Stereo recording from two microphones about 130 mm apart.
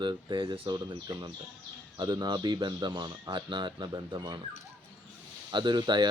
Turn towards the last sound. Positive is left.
turn(degrees=-35)  # may be behind; listen again after turning